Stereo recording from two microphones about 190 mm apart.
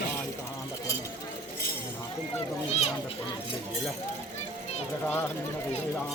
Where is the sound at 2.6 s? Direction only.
35° left (ahead or behind).